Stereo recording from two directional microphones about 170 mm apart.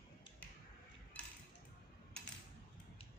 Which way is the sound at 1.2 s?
10° left (ahead or behind).